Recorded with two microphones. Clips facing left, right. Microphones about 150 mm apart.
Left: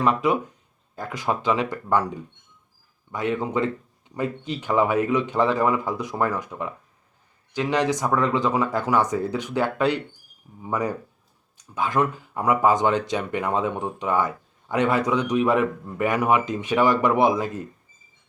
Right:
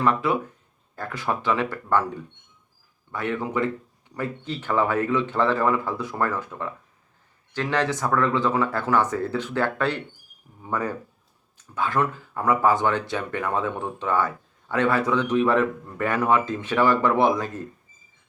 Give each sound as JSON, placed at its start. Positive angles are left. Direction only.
{"t": 0.0, "sound": "speech", "side_deg": 15}
{"t": 3.1, "sound": "speech", "side_deg": 15}